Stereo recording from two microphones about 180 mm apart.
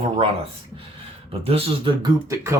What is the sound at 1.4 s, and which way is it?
Speech, 30° right (ahead or behind).